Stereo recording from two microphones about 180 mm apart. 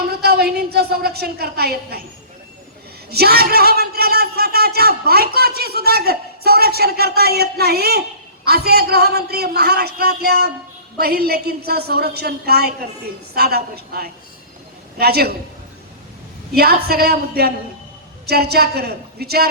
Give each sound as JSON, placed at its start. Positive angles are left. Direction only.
{"t": 0.1, "sound": "a man's voice", "side_deg": -60}
{"t": 3.1, "sound": "a man's voice", "side_deg": -60}
{"t": 16.5, "sound": "a man's voice", "side_deg": -60}